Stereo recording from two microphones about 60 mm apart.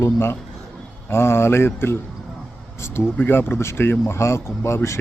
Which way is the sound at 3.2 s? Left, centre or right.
Left.